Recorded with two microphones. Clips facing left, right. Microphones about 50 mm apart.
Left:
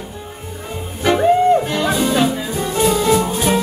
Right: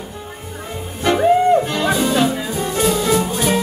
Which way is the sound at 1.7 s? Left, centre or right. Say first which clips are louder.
Even; centre.